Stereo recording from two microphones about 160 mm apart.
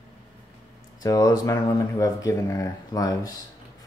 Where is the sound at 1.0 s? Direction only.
20° left (ahead or behind).